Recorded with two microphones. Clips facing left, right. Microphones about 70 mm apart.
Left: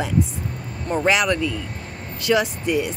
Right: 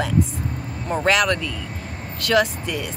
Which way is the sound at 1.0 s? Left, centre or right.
Centre.